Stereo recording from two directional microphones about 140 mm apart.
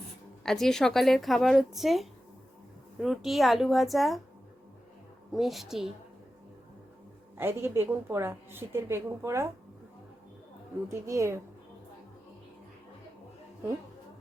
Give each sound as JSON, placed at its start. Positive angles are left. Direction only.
{"t": 0.4, "sound": "a woman's voice", "side_deg": 0}
{"t": 5.3, "sound": "a woman's voice", "side_deg": 0}
{"t": 7.3, "sound": "a woman's voice", "side_deg": -15}
{"t": 10.8, "sound": "a woman's voice", "side_deg": -20}